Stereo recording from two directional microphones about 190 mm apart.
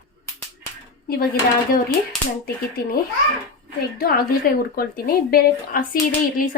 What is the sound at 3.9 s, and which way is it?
Speech, 50° left (ahead or behind).